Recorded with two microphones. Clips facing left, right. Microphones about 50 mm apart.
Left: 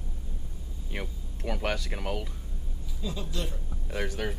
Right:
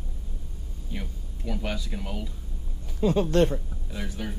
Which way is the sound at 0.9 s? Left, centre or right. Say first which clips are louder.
Left 1 dB; left.